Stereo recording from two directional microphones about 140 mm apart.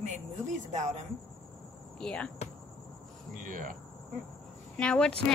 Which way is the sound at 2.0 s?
5° left (ahead or behind).